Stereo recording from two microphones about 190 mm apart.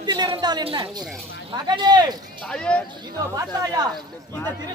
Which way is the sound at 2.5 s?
5° left (ahead or behind).